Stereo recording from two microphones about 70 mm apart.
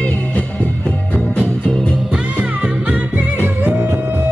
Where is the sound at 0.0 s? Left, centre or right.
Centre.